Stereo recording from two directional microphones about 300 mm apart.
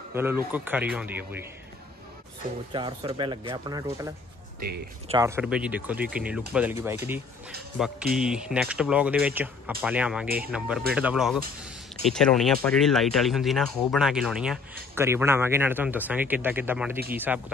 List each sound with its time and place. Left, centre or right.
0.1 s speech: centre
2.7 s speech: centre
4.6 s speech: right
5.0 s speech: centre